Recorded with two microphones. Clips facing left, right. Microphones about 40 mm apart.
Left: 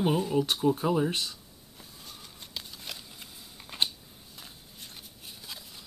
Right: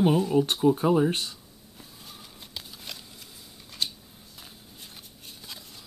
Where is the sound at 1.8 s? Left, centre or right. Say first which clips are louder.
Right 1 dB; centre.